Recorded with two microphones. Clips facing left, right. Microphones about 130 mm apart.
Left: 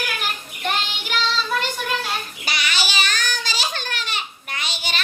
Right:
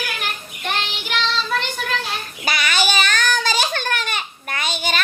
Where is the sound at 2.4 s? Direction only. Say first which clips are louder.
Right 9 dB; 50° right (ahead or behind).